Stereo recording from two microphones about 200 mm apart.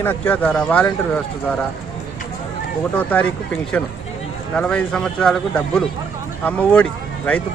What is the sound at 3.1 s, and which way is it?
Speech, 5° left (ahead or behind).